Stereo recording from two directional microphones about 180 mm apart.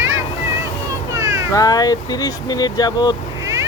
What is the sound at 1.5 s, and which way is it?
Speech, 20° left (ahead or behind).